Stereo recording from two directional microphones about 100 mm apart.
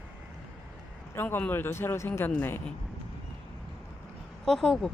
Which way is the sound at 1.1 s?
20° left (ahead or behind).